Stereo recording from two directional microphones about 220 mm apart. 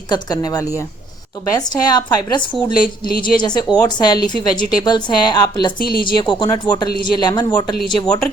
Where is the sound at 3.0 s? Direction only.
40° left (ahead or behind).